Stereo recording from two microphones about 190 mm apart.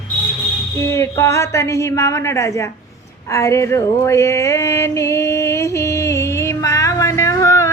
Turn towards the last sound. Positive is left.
turn(degrees=15)  # may be behind; listen again after turning